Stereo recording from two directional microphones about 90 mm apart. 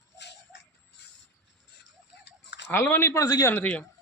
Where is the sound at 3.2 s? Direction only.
45° left (ahead or behind).